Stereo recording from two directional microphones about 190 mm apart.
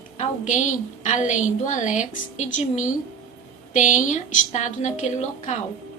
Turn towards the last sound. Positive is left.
turn(degrees=40)  # may be behind; listen again after turning